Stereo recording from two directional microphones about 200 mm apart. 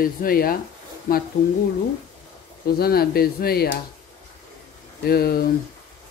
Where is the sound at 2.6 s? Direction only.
50° left (ahead or behind).